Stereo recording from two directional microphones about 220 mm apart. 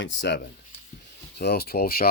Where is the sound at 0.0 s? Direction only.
55° left (ahead or behind).